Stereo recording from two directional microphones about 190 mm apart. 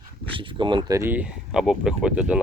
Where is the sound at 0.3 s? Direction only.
25° right (ahead or behind).